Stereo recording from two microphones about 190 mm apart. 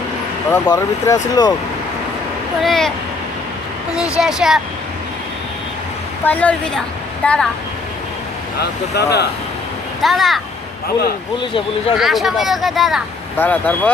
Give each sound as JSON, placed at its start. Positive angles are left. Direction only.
{"t": 0.5, "sound": "speech", "side_deg": 20}
{"t": 2.6, "sound": "speech", "side_deg": 0}
{"t": 4.2, "sound": "speech", "side_deg": 0}
{"t": 6.2, "sound": "speech", "side_deg": 10}
{"t": 9.0, "sound": "speech", "side_deg": 60}
{"t": 10.0, "sound": "speech", "side_deg": 0}
{"t": 11.9, "sound": "speech", "side_deg": 0}